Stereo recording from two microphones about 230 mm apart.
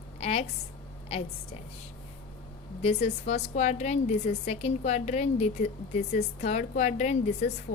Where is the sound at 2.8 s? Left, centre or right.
Left.